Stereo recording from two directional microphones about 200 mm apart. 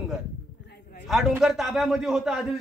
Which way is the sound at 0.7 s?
45° left (ahead or behind).